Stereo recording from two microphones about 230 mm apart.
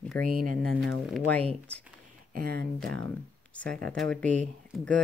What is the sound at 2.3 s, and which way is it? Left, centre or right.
Speech, right.